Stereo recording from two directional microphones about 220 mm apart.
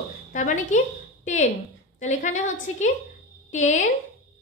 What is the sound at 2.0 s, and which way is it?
A woman's voice, 35° left (ahead or behind).